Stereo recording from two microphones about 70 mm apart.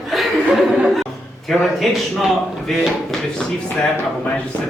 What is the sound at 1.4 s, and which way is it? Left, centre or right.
A man's voice, centre.